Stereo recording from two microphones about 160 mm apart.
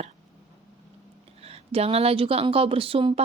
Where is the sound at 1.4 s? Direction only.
40° right (ahead or behind).